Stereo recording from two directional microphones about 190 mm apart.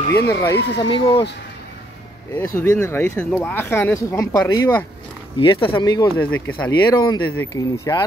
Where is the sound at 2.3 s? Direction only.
15° left (ahead or behind).